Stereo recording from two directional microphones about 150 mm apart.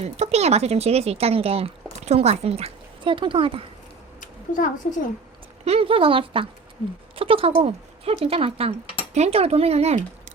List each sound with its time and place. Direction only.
0.0 s speech: 45° right (ahead or behind)
4.2 s a sound: 60° left (ahead or behind)
5.6 s speech: 40° right (ahead or behind)